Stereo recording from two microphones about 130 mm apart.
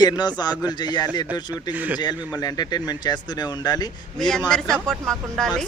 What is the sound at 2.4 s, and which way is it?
Speech, 30° left (ahead or behind).